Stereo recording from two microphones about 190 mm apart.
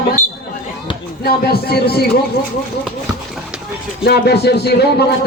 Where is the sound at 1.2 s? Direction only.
55° left (ahead or behind).